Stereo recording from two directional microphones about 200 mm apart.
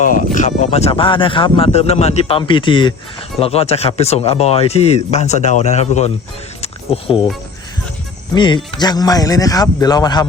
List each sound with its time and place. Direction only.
0.0 s speech: 40° left (ahead or behind)
6.6 s a sound: 30° left (ahead or behind)
8.4 s speech: 25° left (ahead or behind)